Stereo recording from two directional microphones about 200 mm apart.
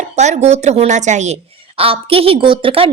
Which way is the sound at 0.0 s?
35° right (ahead or behind).